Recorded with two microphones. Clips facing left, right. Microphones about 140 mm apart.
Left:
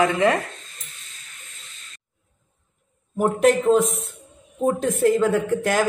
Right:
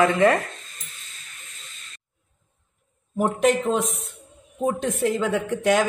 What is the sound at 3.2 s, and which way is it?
Speech, centre (ahead or behind).